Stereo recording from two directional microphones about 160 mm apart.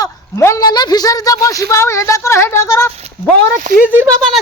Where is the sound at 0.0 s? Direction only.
20° left (ahead or behind).